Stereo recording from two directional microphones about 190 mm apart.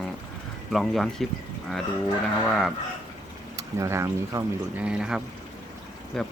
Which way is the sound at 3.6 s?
15° right (ahead or behind).